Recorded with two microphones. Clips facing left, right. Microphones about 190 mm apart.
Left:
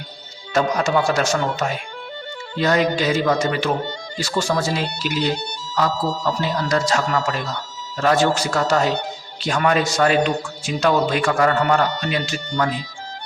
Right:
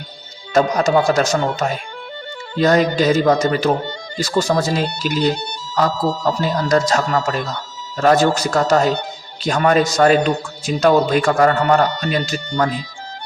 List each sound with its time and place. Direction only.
0.5 s a man's voice: 40° right (ahead or behind)